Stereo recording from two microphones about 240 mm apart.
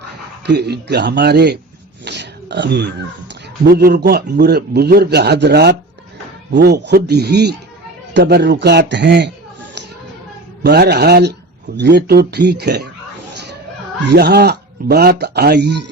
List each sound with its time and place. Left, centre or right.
0.4 s speech: right
2.0 s a sound: right
3.6 s a man's voice: right
10.6 s speech: right
14.1 s speech: right